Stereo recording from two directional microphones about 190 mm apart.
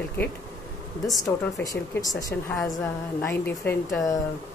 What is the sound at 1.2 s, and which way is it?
Speech, 15° left (ahead or behind).